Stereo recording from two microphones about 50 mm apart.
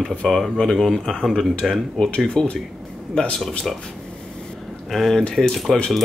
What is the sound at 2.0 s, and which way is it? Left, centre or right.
Speech, centre.